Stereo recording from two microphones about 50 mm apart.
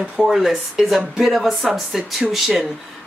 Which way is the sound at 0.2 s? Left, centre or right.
Centre.